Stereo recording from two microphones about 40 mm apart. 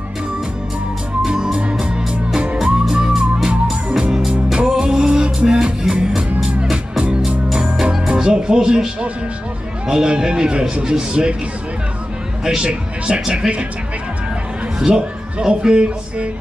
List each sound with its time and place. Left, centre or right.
1.2 s music: centre
2.6 s music: centre
8.2 s a man's voice: centre
12.4 s a man's voice: right
14.9 s speech: right